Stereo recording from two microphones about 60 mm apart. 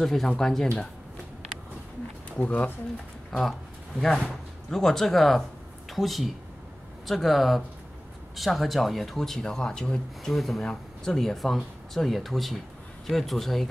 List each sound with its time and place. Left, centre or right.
0.0 s speech: centre
2.3 s speech: left
3.3 s speech: centre
10.3 s speech: centre